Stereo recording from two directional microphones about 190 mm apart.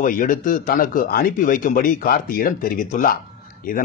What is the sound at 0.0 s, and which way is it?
Speech, 45° left (ahead or behind).